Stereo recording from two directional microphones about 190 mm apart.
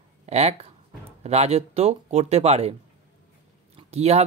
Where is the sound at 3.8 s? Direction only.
35° right (ahead or behind).